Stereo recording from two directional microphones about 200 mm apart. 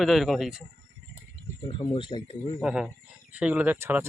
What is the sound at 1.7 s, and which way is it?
Speech, 25° left (ahead or behind).